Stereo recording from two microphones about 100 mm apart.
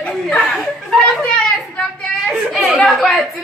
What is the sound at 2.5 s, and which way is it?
Speech, centre (ahead or behind).